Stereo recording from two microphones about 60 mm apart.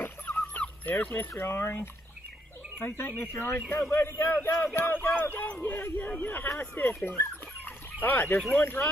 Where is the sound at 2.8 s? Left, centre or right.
Left.